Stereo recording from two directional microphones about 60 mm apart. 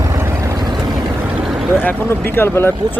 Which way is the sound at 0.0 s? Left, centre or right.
Right.